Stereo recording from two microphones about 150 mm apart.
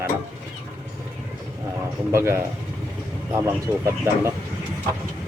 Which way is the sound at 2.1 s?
15° right (ahead or behind).